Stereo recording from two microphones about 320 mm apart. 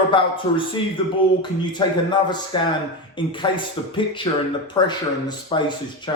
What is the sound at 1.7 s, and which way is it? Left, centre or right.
Speech, centre.